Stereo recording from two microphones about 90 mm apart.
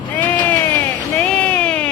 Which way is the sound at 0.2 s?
20° left (ahead or behind).